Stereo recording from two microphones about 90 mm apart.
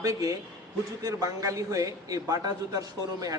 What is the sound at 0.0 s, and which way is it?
A man's voice, 40° right (ahead or behind).